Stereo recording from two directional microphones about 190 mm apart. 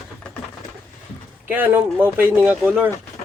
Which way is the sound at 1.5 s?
10° right (ahead or behind).